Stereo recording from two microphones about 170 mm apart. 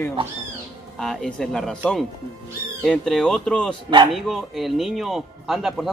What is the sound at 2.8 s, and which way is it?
A man's voice, centre (ahead or behind).